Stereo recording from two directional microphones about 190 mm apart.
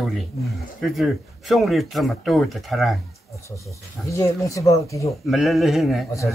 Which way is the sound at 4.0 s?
15° left (ahead or behind).